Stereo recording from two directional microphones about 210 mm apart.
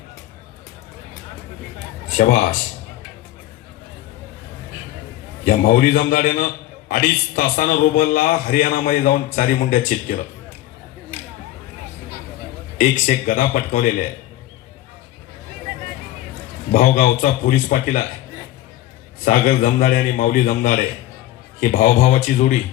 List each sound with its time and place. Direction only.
2.1 s a man's voice: 40° left (ahead or behind)
5.5 s a man's voice: 40° left (ahead or behind)
12.7 s a man's voice: 40° left (ahead or behind)
16.7 s a man's voice: 40° left (ahead or behind)
19.2 s a man's voice: 40° left (ahead or behind)